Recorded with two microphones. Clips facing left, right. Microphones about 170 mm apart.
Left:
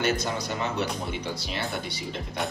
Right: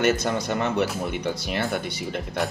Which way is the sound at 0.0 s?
55° right (ahead or behind).